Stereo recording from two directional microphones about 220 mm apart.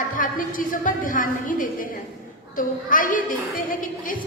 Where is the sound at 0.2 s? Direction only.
40° left (ahead or behind).